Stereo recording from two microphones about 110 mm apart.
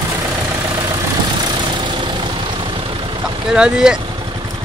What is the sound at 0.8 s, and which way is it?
Vehicle, 35° right (ahead or behind).